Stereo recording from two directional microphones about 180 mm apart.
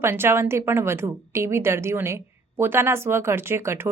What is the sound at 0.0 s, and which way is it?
A woman's voice, 15° right (ahead or behind).